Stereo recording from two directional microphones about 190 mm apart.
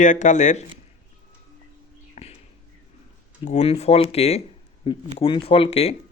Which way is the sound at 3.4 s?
35° left (ahead or behind).